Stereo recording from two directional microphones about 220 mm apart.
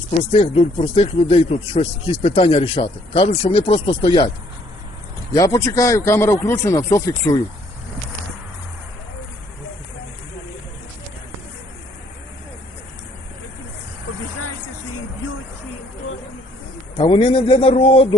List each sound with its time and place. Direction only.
0.3 s speech: 30° left (ahead or behind)
5.3 s speech: 15° left (ahead or behind)
17.0 s speech: 20° left (ahead or behind)